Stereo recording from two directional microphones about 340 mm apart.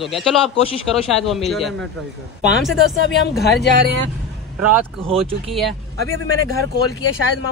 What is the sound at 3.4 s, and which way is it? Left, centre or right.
Speech, left.